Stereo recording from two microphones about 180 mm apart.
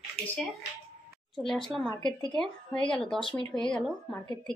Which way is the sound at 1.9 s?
25° left (ahead or behind).